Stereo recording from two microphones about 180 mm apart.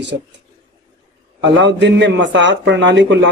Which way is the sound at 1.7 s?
85° right.